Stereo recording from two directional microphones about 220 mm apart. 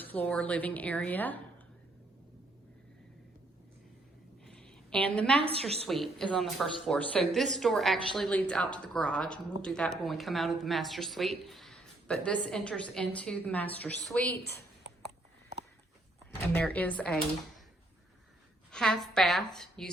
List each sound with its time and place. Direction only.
0.0 s a woman's voice: 10° left (ahead or behind)
4.4 s a sound: centre (ahead or behind)
5.4 s a woman's voice: 25° right (ahead or behind)
5.9 s speech: centre (ahead or behind)
14.3 s a woman's voice: 45° left (ahead or behind)
16.5 s a woman's voice: 10° left (ahead or behind)
18.7 s speech: 5° left (ahead or behind)